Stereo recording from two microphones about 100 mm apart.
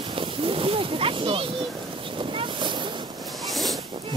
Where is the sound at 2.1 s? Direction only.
55° right (ahead or behind).